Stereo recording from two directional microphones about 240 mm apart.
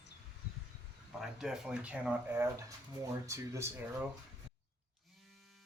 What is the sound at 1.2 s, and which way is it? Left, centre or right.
Speech, centre.